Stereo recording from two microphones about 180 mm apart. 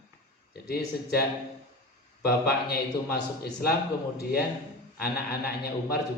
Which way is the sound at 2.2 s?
60° left (ahead or behind).